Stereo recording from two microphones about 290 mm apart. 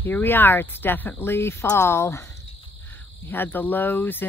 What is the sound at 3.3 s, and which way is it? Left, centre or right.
Speech, centre.